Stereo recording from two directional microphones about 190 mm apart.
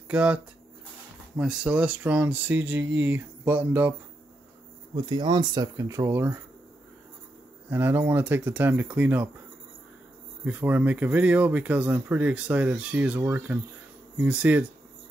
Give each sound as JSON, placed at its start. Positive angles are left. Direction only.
{"t": 0.1, "sound": "speech", "side_deg": -5}
{"t": 1.4, "sound": "speech", "side_deg": -5}
{"t": 4.9, "sound": "speech", "side_deg": -20}
{"t": 7.7, "sound": "speech", "side_deg": -10}
{"t": 10.4, "sound": "speech", "side_deg": -10}